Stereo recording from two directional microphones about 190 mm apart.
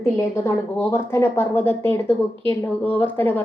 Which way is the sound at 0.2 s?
10° left (ahead or behind).